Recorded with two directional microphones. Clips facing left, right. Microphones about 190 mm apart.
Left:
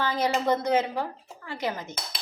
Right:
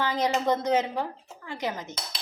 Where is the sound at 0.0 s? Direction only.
15° right (ahead or behind).